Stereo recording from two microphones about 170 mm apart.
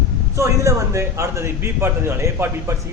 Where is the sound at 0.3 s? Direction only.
15° right (ahead or behind).